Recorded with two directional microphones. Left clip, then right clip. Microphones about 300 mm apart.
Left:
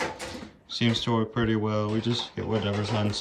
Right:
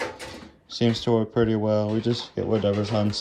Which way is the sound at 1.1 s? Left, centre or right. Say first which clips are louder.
Right 5 dB; centre.